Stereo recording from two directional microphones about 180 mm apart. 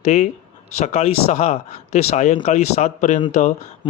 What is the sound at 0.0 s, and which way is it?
Speech, 40° left (ahead or behind).